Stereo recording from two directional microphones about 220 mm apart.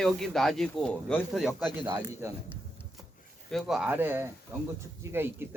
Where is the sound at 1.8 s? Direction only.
20° right (ahead or behind).